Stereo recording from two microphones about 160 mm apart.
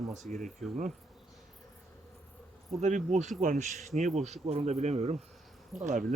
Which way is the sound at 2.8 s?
50° right (ahead or behind).